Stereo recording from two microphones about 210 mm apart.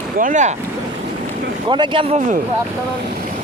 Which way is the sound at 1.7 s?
20° right (ahead or behind).